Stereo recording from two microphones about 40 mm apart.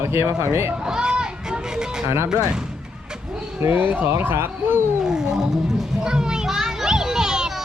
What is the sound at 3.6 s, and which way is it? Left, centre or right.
Speech, right.